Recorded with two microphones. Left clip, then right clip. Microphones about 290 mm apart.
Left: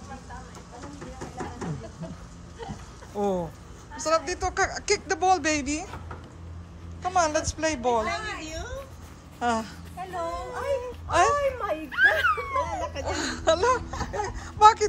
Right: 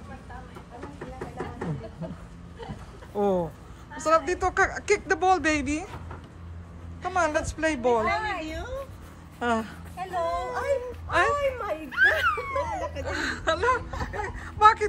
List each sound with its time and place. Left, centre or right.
3.2 s speech: centre
7.0 s speech: centre
8.0 s a sound: right
9.4 s speech: centre
10.2 s a sound: centre
11.1 s speech: centre